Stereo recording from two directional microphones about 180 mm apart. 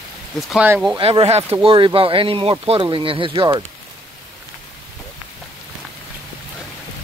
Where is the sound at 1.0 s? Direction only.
35° right (ahead or behind).